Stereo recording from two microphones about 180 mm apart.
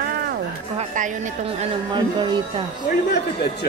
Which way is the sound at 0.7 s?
45° right (ahead or behind).